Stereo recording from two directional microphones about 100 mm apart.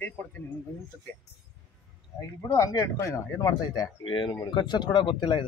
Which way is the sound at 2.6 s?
35° left (ahead or behind).